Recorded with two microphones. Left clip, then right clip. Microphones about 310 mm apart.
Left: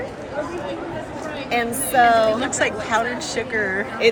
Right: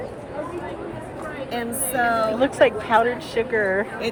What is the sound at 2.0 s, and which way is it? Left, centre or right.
Speech, left.